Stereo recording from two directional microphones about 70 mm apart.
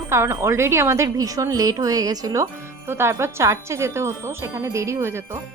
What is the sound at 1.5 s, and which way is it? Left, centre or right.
Wind chime, right.